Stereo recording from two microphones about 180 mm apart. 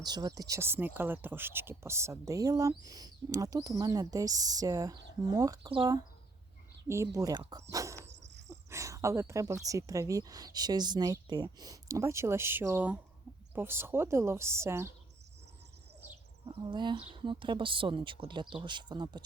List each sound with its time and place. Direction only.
0.0 s speech: 20° right (ahead or behind)
6.8 s speech: 15° right (ahead or behind)
8.0 s dog: 75° right (ahead or behind)
8.4 s a sound: 15° right (ahead or behind)
9.6 s a woman's voice: 20° right (ahead or behind)
16.5 s speech: 25° right (ahead or behind)